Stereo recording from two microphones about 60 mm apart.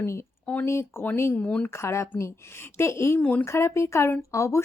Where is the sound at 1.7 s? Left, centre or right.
Left.